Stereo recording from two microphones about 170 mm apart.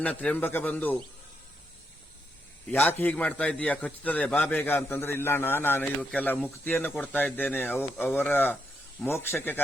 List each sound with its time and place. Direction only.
0.0 s a man's voice: 5° left (ahead or behind)
2.6 s a man's voice: 10° left (ahead or behind)
5.8 s a man's voice: centre (ahead or behind)